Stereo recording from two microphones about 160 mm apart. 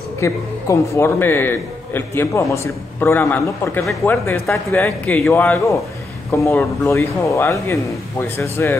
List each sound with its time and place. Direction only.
0.2 s a man's voice: 20° left (ahead or behind)